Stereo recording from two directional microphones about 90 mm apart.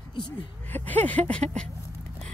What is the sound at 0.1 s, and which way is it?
Speech, 65° left (ahead or behind).